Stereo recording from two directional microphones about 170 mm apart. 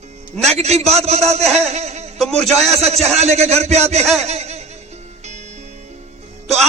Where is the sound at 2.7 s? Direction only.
40° right (ahead or behind).